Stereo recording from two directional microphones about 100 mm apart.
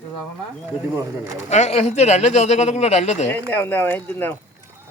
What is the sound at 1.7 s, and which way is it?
Speech, 90° left.